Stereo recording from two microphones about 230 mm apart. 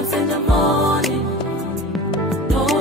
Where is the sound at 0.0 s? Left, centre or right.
Centre.